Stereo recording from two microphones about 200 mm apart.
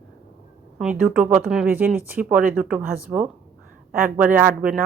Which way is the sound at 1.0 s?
5° right (ahead or behind).